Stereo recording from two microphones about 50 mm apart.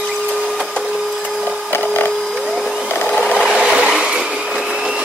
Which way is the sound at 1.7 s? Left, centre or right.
Left.